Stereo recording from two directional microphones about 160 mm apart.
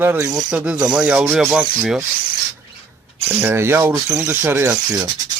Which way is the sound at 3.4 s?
15° right (ahead or behind).